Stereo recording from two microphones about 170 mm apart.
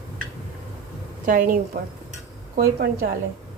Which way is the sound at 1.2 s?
50° right (ahead or behind).